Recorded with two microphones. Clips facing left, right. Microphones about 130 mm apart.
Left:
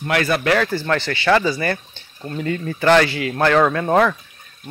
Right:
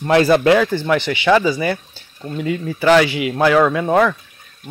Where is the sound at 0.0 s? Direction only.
30° right (ahead or behind).